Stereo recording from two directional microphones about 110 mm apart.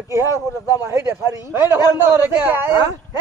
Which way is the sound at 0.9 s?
25° right (ahead or behind).